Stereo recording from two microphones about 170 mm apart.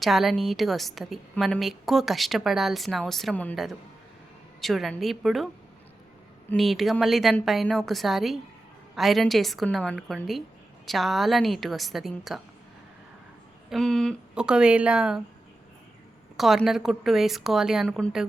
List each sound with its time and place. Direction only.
0.0 s a woman's voice: centre (ahead or behind)
6.6 s a woman's voice: centre (ahead or behind)
13.7 s a woman's voice: 5° left (ahead or behind)
16.4 s a woman's voice: centre (ahead or behind)